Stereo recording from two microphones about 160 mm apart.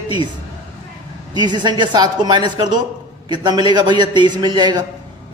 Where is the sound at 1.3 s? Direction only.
30° right (ahead or behind).